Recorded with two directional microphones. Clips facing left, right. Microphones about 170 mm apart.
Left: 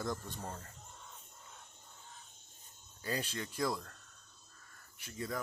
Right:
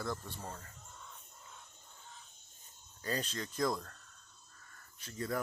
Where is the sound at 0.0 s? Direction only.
15° left (ahead or behind).